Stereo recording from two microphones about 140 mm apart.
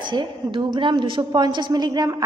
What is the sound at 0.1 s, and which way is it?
A woman's voice, 35° right (ahead or behind).